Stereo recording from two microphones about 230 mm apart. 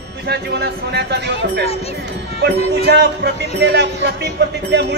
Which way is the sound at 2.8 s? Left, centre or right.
Right.